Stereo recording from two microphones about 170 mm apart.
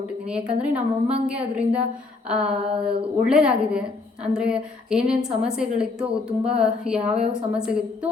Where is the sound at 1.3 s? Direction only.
5° right (ahead or behind).